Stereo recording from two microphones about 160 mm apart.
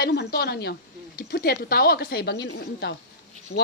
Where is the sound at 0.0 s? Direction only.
85° left.